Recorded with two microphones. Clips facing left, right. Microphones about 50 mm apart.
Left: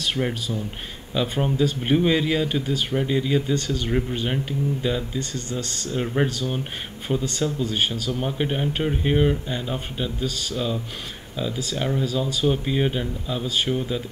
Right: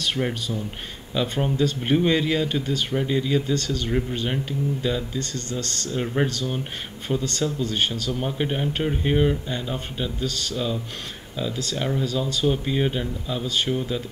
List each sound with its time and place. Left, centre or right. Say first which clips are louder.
0.0 s speech: even; centre